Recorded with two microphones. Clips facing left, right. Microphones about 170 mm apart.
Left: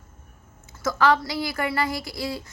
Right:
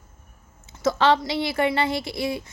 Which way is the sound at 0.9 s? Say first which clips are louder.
Right 2 dB; 25° right (ahead or behind).